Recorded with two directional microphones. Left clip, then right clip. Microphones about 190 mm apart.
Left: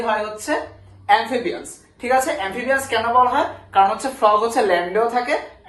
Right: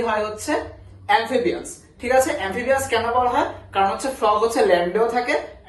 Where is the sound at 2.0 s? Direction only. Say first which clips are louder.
Even; 15° left (ahead or behind).